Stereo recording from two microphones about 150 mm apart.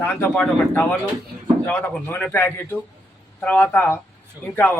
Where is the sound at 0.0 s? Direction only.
10° left (ahead or behind).